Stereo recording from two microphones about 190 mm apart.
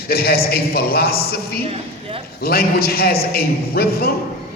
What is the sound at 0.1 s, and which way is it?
A man's voice, 50° left (ahead or behind).